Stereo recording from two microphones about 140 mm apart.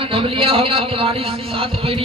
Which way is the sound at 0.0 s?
40° right (ahead or behind).